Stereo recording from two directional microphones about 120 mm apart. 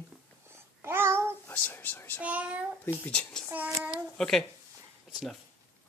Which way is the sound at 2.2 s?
10° right (ahead or behind).